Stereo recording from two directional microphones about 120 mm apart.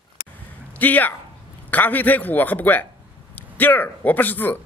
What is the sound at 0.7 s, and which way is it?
A man's voice, 15° left (ahead or behind).